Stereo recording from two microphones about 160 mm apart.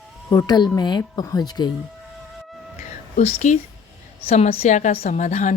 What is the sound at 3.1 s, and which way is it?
Speech, 45° left (ahead or behind).